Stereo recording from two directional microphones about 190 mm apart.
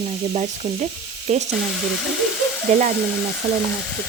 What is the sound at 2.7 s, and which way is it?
Speech, 40° right (ahead or behind).